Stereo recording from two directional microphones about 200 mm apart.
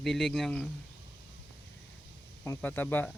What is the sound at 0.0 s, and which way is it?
Speech, centre (ahead or behind).